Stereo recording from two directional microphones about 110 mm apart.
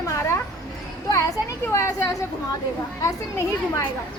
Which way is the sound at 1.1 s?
30° left (ahead or behind).